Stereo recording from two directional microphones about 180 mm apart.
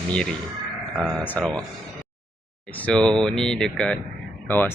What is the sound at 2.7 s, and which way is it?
Speech, 5° left (ahead or behind).